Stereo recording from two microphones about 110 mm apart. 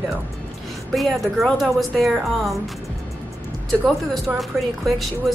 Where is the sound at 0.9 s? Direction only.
Centre (ahead or behind).